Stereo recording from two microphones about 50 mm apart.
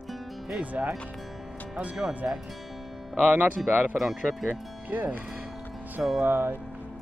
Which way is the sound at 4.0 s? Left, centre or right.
Centre.